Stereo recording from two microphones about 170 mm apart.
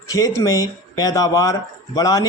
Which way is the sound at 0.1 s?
20° left (ahead or behind).